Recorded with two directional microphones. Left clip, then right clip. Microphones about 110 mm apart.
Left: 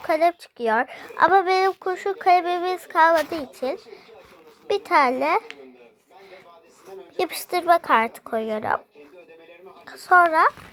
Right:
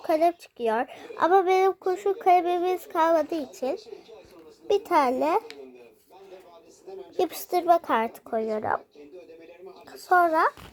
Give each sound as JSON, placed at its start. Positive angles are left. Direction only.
{"t": 0.1, "sound": "speech", "side_deg": -5}
{"t": 3.2, "sound": "speech", "side_deg": 0}
{"t": 7.2, "sound": "speech", "side_deg": 0}
{"t": 8.2, "sound": "a woman's voice", "side_deg": 15}
{"t": 8.4, "sound": "speech", "side_deg": 30}
{"t": 9.9, "sound": "speech", "side_deg": 0}